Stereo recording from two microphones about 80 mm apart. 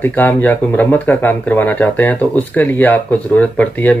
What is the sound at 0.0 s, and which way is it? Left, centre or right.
Speech, left.